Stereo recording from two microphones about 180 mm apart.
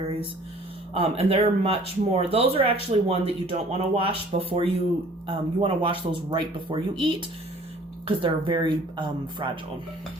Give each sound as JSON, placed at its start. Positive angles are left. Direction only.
{"t": 0.9, "sound": "speech", "side_deg": -35}